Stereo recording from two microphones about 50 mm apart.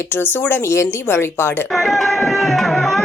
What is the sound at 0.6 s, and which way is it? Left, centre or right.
Speech, left.